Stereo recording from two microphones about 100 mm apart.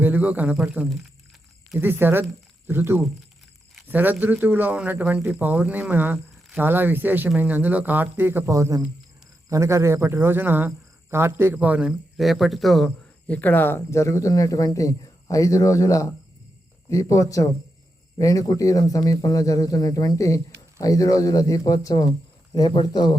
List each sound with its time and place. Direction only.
0.0 s speech: 15° right (ahead or behind)
8.5 s speech: 35° right (ahead or behind); by 11.9 s 15° right (ahead or behind)
11.9 s speech: centre (ahead or behind)
13.2 s speech: 15° left (ahead or behind); by 23.1 s 45° left (ahead or behind)